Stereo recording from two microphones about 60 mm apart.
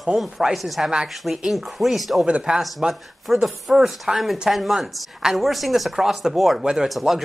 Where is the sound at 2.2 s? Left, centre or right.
Centre.